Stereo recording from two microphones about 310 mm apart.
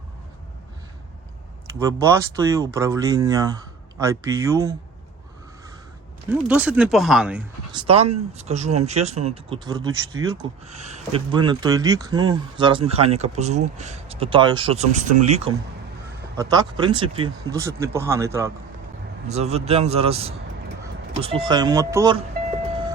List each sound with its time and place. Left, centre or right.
1.9 s speech: centre
6.3 s speech: centre
7.7 s speech: centre
19.3 s speech: centre